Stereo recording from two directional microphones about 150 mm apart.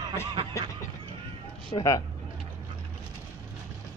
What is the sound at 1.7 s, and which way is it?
Speech, 25° left (ahead or behind).